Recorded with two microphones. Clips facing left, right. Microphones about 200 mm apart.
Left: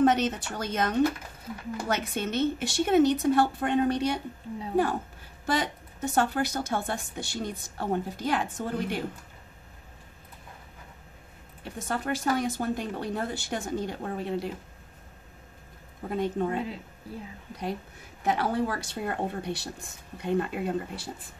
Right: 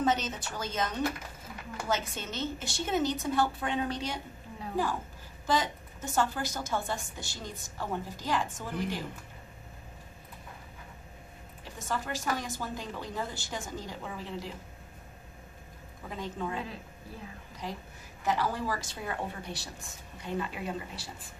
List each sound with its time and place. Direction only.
0.0 s a woman's voice: 60° left (ahead or behind)
5.5 s a woman's voice: 60° left (ahead or behind)
11.6 s a woman's voice: 60° left (ahead or behind)
16.0 s a woman's voice: 50° left (ahead or behind)
18.2 s a woman's voice: 60° left (ahead or behind)